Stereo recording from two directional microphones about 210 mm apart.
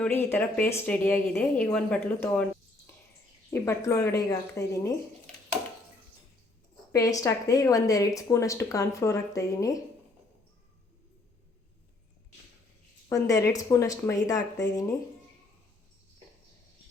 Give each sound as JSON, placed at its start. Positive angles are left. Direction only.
{"t": 0.0, "sound": "a woman's voice", "side_deg": 10}
{"t": 6.9, "sound": "a woman's voice", "side_deg": 15}
{"t": 13.1, "sound": "a woman's voice", "side_deg": 15}